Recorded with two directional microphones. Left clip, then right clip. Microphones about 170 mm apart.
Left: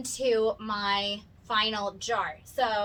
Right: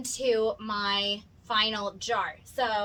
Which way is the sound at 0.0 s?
20° right (ahead or behind).